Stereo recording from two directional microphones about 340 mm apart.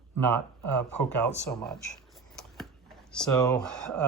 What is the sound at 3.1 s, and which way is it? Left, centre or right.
Speech, centre.